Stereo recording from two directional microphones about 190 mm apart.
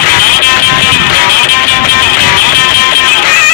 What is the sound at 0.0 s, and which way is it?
Music, 50° left (ahead or behind).